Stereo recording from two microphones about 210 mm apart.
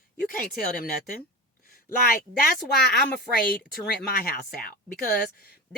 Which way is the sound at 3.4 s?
45° left (ahead or behind).